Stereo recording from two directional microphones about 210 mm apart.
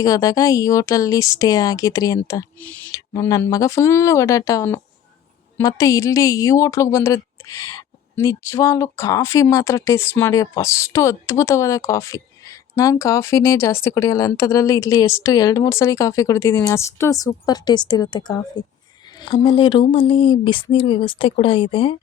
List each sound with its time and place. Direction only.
0.0 s a woman's voice: 15° left (ahead or behind)